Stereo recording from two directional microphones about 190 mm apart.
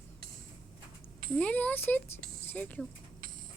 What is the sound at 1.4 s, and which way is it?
A child's voice, 5° left (ahead or behind).